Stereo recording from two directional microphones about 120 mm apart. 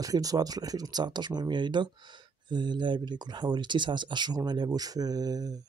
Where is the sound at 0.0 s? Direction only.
30° right (ahead or behind).